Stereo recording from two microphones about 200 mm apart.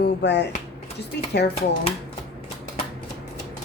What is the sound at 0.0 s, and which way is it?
Speech, 60° left (ahead or behind).